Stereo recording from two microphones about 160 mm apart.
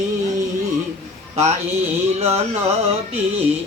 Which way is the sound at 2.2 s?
40° right (ahead or behind).